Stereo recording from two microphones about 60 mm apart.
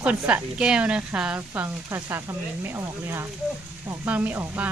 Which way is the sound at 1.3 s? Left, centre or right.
Right.